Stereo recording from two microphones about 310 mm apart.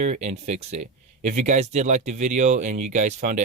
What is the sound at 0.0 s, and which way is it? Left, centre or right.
Speech, right.